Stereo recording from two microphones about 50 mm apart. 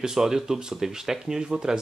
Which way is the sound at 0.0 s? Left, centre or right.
Centre.